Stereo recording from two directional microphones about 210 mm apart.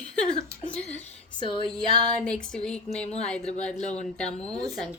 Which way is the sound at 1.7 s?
5° left (ahead or behind).